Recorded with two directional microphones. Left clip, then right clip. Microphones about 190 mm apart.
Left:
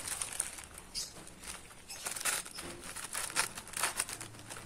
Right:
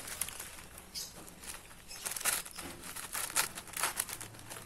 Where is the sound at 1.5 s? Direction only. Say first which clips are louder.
Left 1 dB; centre (ahead or behind).